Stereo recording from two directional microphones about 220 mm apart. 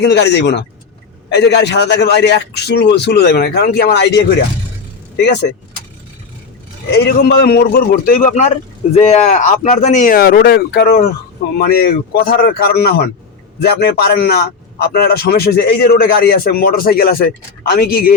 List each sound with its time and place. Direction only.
0.0 s a man's voice: 50° left (ahead or behind)
6.9 s a man's voice: 50° left (ahead or behind)